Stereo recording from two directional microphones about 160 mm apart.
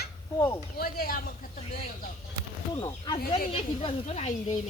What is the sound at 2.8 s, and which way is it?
Speech, 30° left (ahead or behind).